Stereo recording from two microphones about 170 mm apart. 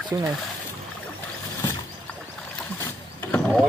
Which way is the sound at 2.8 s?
15° left (ahead or behind).